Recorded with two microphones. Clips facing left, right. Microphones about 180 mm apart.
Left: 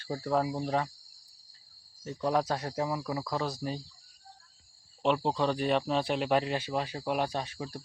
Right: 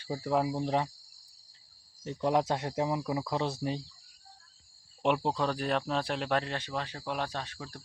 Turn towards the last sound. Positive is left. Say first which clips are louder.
# left 4 dB
turn(degrees=15)  # may be behind; listen again after turning